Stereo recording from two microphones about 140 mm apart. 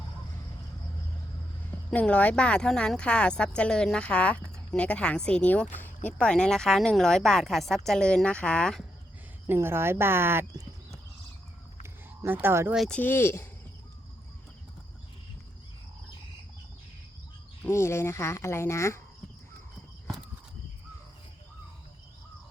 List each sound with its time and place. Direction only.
1.9 s a woman's voice: 10° left (ahead or behind)
9.5 s speech: 15° right (ahead or behind)
11.8 s a sound: 15° right (ahead or behind)
12.7 s speech: centre (ahead or behind)
13.0 s a woman's voice: 15° left (ahead or behind)
17.6 s speech: 20° left (ahead or behind)